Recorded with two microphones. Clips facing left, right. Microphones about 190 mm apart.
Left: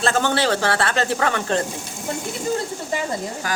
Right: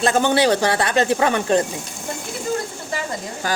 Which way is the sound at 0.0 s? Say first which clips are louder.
Right 3 dB; 15° right (ahead or behind).